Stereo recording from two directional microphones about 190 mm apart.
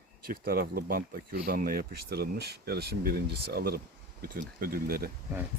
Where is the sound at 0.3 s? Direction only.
50° right (ahead or behind).